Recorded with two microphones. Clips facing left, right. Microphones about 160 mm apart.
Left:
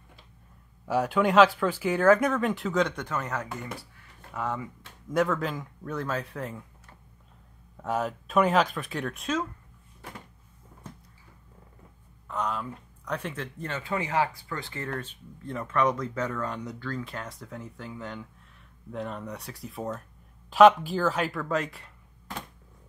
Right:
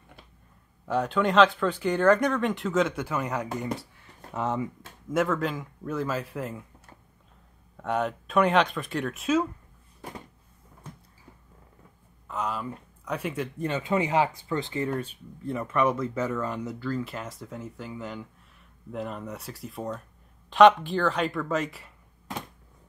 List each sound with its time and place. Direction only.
0.8 s speech: 10° left (ahead or behind); by 4.6 s 25° right (ahead or behind)
5.1 s speech: centre (ahead or behind)
7.7 s speech: centre (ahead or behind)
12.3 s speech: 5° right (ahead or behind)